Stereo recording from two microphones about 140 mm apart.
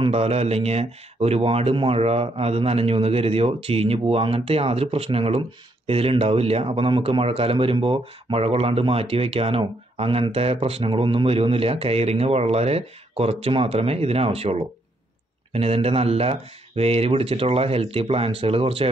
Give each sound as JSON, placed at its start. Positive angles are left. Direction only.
{"t": 0.0, "sound": "speech", "side_deg": -45}